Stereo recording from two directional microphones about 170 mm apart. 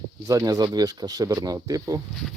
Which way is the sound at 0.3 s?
20° right (ahead or behind).